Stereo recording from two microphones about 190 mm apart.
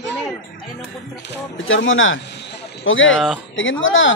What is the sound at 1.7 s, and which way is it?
Speech, 90° left.